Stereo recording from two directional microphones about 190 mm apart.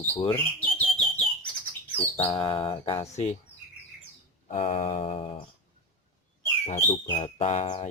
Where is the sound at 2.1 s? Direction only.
20° left (ahead or behind).